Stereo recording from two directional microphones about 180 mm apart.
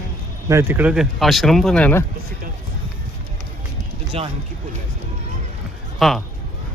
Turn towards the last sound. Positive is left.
turn(degrees=0)  # may be behind; listen again after turning